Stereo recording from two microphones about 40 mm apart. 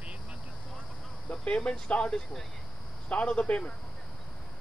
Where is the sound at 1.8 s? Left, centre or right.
Left.